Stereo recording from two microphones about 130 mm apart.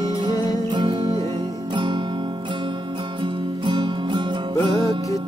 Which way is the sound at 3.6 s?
35° right (ahead or behind).